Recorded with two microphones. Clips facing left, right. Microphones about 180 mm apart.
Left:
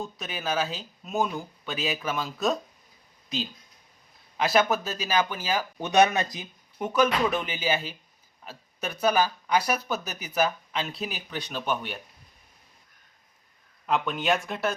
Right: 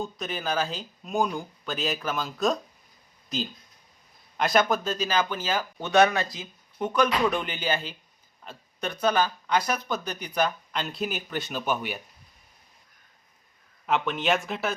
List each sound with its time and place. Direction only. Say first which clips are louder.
0.0 s speech: right 2 dB; centre (ahead or behind); by 6.5 s 20° left (ahead or behind)
6.7 s speech: even; 5° left (ahead or behind)
13.8 s speech: even; centre (ahead or behind)